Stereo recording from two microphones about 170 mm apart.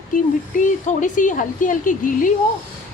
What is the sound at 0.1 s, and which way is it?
Speech, 50° left (ahead or behind).